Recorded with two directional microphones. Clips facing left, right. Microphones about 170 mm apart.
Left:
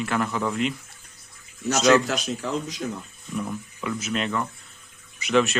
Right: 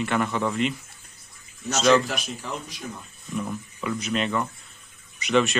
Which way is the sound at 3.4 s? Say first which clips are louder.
Even; centre (ahead or behind).